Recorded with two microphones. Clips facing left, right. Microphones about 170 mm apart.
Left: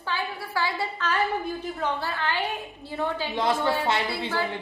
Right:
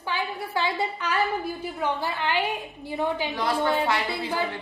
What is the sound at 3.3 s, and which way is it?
Speech, 25° left (ahead or behind).